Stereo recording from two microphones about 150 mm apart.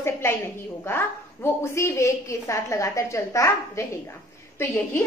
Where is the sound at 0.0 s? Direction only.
15° left (ahead or behind).